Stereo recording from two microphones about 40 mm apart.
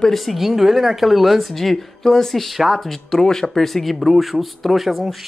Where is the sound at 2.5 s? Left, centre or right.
Centre.